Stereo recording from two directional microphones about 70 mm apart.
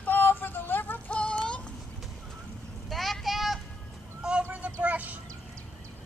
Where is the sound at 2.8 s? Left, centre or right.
Centre.